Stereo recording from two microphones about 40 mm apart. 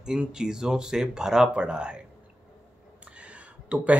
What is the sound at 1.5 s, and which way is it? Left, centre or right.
Speech, right.